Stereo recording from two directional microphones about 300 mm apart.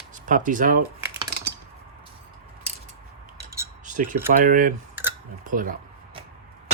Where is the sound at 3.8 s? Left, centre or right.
Right.